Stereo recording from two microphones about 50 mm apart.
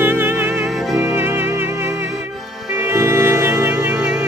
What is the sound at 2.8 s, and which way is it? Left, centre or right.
Music, right.